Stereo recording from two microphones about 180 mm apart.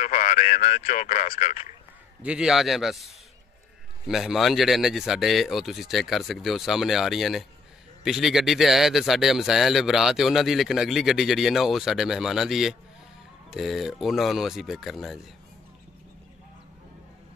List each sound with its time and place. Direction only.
0.0 s speech: 45° left (ahead or behind)
2.2 s speech: 5° right (ahead or behind)
4.1 s speech: centre (ahead or behind)